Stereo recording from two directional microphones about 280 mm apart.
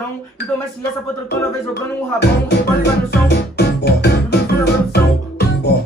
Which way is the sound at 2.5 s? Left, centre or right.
Left.